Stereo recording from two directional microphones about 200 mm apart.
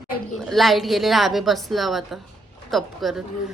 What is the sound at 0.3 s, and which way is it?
A woman's voice, centre (ahead or behind).